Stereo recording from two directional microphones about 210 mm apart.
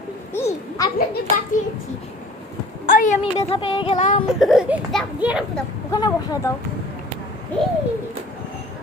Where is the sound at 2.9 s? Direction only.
40° left (ahead or behind).